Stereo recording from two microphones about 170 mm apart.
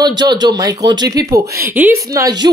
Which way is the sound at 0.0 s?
25° right (ahead or behind).